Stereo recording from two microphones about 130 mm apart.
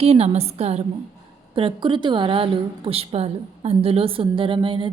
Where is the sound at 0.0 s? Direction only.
50° right (ahead or behind).